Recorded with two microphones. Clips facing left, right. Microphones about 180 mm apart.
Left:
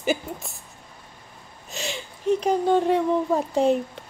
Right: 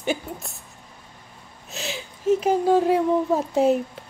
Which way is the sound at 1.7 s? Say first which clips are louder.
Even; centre (ahead or behind).